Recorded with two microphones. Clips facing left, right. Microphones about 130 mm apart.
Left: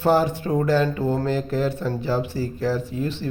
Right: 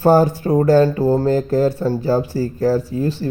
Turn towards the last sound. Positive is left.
turn(degrees=-40)  # may be behind; listen again after turning